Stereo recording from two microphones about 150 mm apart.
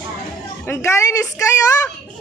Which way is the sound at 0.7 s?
20° left (ahead or behind).